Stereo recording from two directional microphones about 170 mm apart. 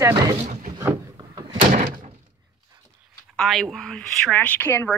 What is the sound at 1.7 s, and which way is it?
Thunk, 50° right (ahead or behind).